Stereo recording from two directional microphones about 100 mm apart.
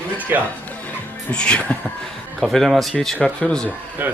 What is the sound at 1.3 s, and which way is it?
Speech, 10° left (ahead or behind).